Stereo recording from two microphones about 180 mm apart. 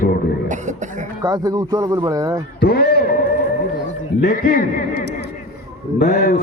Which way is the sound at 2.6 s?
60° left (ahead or behind).